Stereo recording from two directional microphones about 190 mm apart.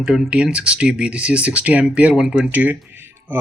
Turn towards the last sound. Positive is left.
turn(degrees=-10)  # may be behind; listen again after turning